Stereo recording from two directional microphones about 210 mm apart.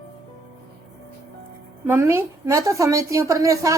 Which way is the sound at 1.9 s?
10° right (ahead or behind).